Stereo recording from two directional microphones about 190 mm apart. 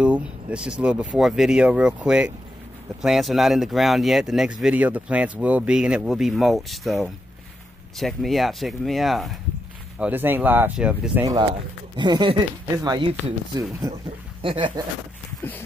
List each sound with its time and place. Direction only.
0.0 s speech: 5° right (ahead or behind)
11.2 s speech: 25° right (ahead or behind)